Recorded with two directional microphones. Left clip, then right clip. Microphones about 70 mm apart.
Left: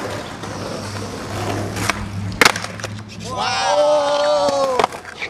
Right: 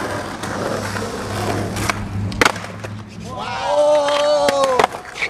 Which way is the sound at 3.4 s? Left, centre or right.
Left.